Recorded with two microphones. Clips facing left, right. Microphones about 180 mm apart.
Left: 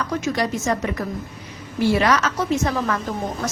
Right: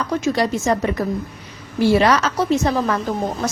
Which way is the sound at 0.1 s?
30° right (ahead or behind).